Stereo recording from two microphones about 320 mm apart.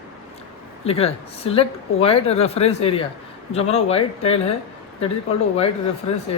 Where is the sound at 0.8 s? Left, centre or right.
Centre.